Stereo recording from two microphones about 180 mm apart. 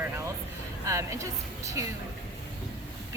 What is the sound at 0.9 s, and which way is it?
Speech, 15° right (ahead or behind).